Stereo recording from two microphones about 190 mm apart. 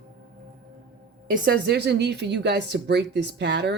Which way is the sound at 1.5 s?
60° right (ahead or behind).